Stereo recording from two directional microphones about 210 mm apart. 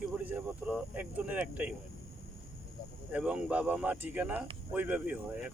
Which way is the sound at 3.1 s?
5° right (ahead or behind).